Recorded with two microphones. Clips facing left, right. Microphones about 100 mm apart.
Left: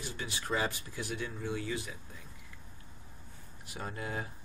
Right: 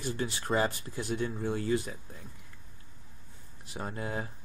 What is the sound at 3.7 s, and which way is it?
Speech, 25° right (ahead or behind).